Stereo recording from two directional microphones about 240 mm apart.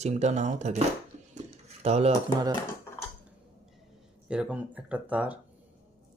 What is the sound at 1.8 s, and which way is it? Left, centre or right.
Speech, right.